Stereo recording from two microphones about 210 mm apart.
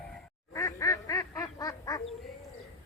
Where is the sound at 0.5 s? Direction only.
15° left (ahead or behind).